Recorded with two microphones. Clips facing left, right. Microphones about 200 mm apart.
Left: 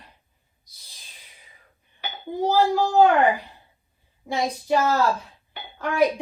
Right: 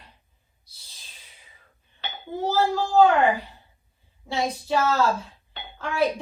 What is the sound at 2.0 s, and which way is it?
Dishes, 15° left (ahead or behind).